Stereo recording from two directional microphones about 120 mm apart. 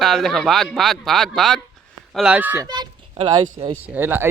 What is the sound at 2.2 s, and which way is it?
Speech, 10° right (ahead or behind).